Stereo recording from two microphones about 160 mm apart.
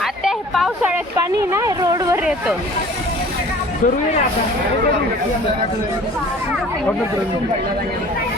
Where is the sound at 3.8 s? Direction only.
50° left (ahead or behind).